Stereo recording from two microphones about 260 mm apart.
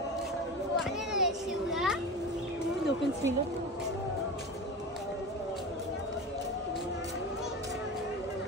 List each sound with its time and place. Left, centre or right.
0.7 s children playing: centre